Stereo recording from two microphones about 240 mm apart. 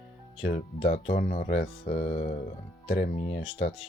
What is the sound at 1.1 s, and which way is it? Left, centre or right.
Speech, left.